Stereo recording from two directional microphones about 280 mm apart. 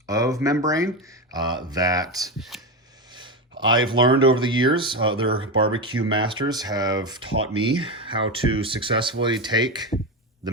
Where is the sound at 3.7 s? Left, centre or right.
Centre.